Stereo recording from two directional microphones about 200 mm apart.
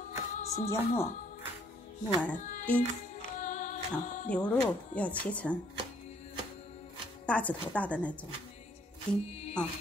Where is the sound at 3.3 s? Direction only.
40° left (ahead or behind).